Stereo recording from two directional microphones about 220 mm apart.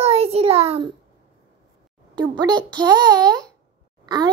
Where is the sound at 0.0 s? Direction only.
25° right (ahead or behind).